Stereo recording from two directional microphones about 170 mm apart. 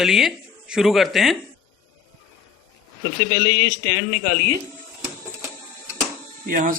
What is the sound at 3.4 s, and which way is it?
Speech, 60° right (ahead or behind).